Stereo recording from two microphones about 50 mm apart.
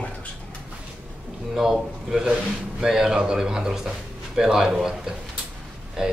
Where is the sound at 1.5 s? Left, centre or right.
Centre.